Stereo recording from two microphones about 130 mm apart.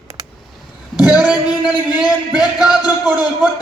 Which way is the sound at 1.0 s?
5° right (ahead or behind).